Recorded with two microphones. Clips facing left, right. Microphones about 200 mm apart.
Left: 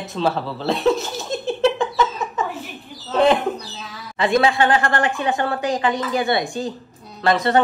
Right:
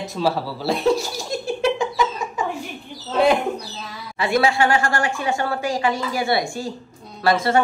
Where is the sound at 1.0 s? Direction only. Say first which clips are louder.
Even; 20° left (ahead or behind).